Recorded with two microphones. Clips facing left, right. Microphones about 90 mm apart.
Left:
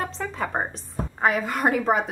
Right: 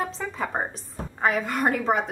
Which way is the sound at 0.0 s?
Centre (ahead or behind).